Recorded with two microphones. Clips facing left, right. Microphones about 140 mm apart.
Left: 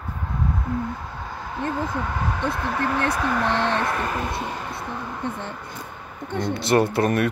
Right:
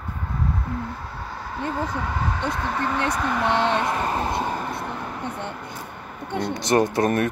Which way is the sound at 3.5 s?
15° right (ahead or behind).